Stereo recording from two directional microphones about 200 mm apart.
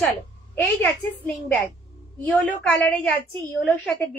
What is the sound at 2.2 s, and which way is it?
A woman's voice, 5° left (ahead or behind).